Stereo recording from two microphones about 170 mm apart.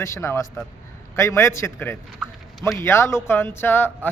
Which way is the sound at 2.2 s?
Centre (ahead or behind).